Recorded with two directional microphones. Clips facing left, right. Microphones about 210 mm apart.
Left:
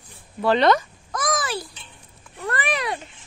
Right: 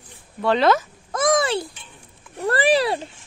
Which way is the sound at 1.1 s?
25° right (ahead or behind).